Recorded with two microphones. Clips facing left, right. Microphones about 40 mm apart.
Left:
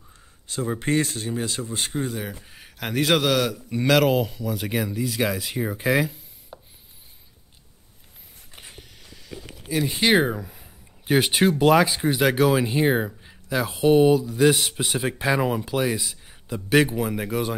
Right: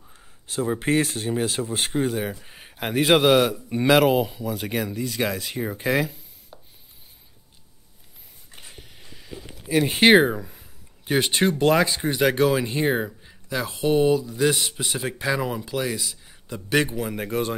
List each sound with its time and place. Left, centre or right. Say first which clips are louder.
0.1 s a man's voice: right 2 dB; centre
6.5 s a sound: left 4 dB; centre
8.5 s a sound: left 1 dB; centre
8.9 s mechanisms: right 1 dB; centre
9.7 s speech: right 5 dB; right
10.1 s speech: right 3 dB; centre